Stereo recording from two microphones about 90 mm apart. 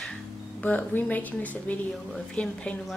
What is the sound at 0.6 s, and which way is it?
A woman's voice, 20° left (ahead or behind).